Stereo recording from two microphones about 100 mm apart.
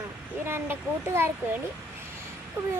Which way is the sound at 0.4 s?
25° right (ahead or behind).